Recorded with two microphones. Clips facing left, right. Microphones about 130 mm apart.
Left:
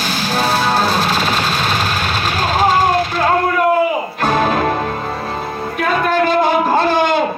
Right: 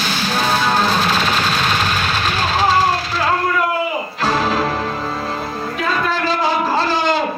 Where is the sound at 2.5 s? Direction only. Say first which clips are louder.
Left 3 dB; 50° left (ahead or behind).